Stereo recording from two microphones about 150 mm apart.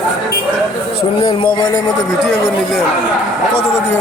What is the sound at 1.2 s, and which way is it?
Speech, 30° left (ahead or behind).